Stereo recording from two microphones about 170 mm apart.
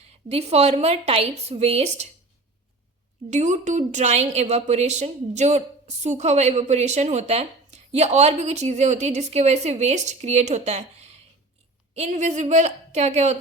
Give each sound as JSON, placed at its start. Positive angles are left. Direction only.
{"t": 0.0, "sound": "a woman's voice", "side_deg": -35}
{"t": 3.2, "sound": "a woman's voice", "side_deg": -45}